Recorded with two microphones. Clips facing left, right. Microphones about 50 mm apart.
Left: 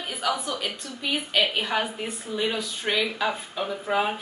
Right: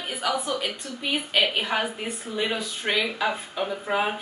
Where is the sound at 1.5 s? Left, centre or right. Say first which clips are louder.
Even; centre.